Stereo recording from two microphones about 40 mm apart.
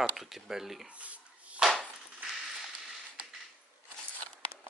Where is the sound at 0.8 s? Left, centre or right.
Right.